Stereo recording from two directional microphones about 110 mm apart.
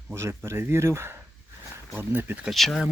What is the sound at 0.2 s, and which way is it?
Speech, 25° right (ahead or behind).